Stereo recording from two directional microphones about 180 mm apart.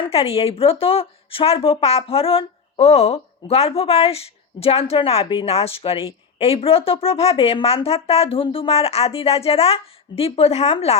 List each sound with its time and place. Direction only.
0.0 s a woman's voice: 30° left (ahead or behind)